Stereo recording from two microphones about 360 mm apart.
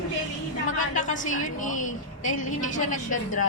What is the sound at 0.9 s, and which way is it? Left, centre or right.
A woman's voice, left.